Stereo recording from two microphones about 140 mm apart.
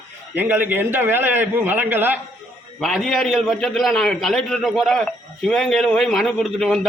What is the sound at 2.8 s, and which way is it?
A man's voice, centre (ahead or behind).